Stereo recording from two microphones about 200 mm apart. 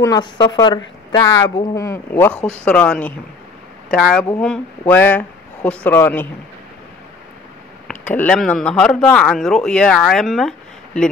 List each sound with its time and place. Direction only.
0.0 s a woman's voice: 20° left (ahead or behind)
7.9 s speech: 10° left (ahead or behind)